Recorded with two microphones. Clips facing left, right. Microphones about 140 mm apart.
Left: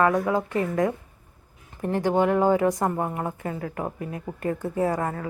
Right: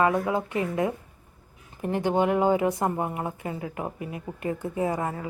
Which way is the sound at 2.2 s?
20° right (ahead or behind).